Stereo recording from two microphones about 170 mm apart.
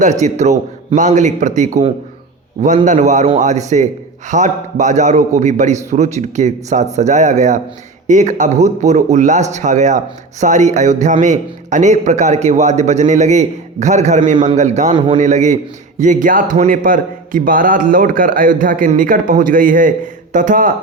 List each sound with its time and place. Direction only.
0.0 s a man's voice: 45° right (ahead or behind)
14.9 s a man's voice: 30° right (ahead or behind)
15.2 s a man's voice: 45° right (ahead or behind)